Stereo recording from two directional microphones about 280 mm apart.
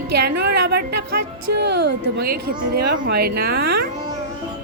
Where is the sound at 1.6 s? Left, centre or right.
Right.